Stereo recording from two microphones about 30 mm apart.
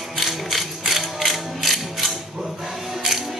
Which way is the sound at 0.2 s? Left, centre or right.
Centre.